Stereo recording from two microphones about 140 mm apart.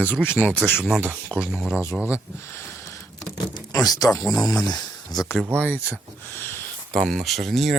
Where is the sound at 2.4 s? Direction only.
15° left (ahead or behind).